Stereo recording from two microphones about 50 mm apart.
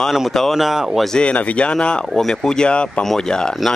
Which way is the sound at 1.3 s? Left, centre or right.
Left.